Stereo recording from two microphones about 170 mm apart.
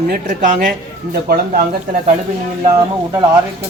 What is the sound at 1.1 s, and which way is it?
Speech, 70° right (ahead or behind).